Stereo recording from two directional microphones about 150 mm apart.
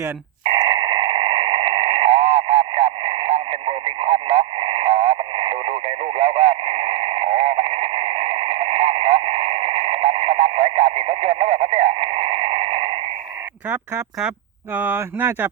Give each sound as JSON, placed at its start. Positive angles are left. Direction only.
{"t": 0.5, "sound": "radio", "side_deg": -30}
{"t": 13.7, "sound": "speech", "side_deg": -10}